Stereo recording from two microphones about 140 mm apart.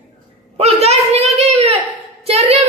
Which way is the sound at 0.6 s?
50° right (ahead or behind).